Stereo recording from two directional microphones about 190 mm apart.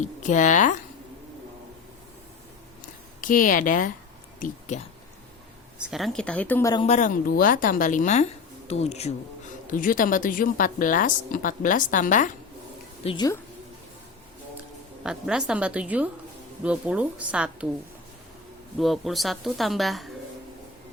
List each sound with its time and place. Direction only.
0.0 s speech: 40° left (ahead or behind)
3.2 s a woman's voice: 45° left (ahead or behind)
4.4 s a sound: 45° left (ahead or behind)
5.9 s speech: centre (ahead or behind)
6.8 s speech: 40° left (ahead or behind)
9.6 s a woman's voice: 45° left (ahead or behind)
13.1 s speech: 20° left (ahead or behind)
15.0 s a woman's voice: 5° right (ahead or behind)
18.8 s speech: centre (ahead or behind)